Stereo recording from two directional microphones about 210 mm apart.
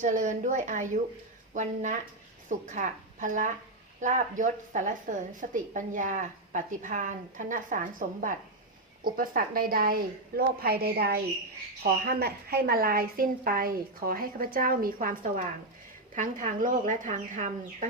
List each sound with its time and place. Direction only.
0.0 s a woman's voice: 35° right (ahead or behind)